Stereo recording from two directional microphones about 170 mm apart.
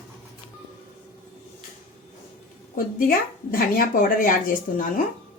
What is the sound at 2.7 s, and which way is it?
A woman's voice, 60° left (ahead or behind).